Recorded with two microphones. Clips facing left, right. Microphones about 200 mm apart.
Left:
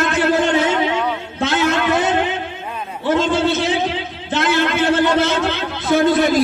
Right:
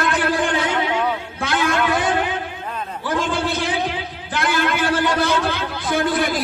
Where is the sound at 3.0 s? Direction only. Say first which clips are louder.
Left 6 dB; 25° left (ahead or behind).